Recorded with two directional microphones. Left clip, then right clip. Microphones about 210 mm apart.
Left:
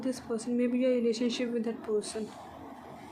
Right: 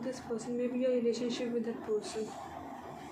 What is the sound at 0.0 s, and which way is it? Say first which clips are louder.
A woman's voice: left 4 dB; 50° left (ahead or behind).